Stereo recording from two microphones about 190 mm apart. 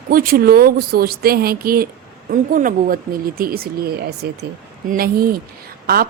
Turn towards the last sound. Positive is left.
turn(degrees=-55)  # may be behind; listen again after turning